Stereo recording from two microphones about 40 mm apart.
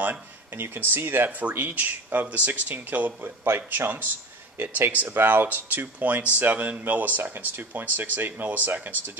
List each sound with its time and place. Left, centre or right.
0.6 s speech: right
1.5 s speech: right
3.2 s speech: right
4.6 s speech: right
4.9 s speech: right